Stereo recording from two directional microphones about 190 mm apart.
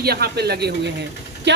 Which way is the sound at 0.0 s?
55° right (ahead or behind).